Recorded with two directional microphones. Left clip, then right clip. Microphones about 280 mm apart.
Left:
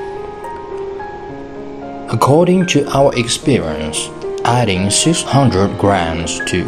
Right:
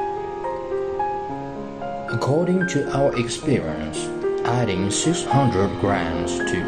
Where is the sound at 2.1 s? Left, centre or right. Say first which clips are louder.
Left 10 dB; centre.